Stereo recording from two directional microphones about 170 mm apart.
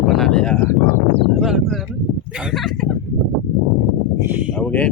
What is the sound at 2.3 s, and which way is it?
Speech, 5° right (ahead or behind).